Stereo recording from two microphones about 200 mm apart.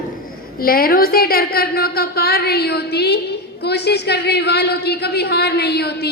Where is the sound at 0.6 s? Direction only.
45° left (ahead or behind).